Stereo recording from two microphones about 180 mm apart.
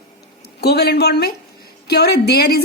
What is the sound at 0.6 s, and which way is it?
Speech, 65° left (ahead or behind).